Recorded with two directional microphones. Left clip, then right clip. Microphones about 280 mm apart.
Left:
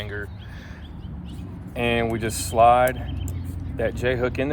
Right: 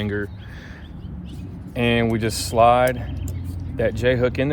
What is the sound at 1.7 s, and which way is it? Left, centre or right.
Speech, right.